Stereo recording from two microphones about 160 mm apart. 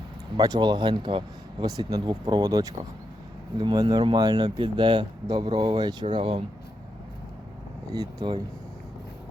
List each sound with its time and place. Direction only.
0.3 s speech: 25° right (ahead or behind)
7.9 s speech: 30° right (ahead or behind)